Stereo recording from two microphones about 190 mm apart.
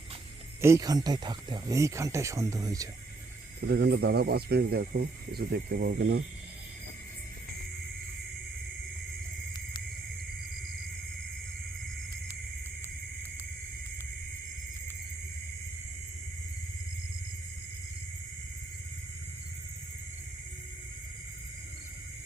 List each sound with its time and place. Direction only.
0.6 s speech: 15° right (ahead or behind)
3.7 s speech: 60° right (ahead or behind)